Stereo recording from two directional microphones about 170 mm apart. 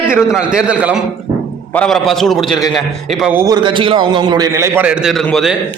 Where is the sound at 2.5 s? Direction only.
25° left (ahead or behind).